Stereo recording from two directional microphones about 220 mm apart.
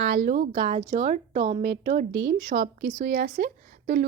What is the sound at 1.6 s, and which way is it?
Speech, 45° right (ahead or behind).